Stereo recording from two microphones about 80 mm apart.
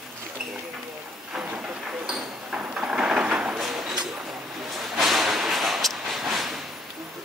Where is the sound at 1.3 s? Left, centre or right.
Centre.